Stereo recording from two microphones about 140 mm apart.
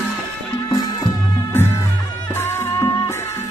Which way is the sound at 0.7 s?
30° left (ahead or behind).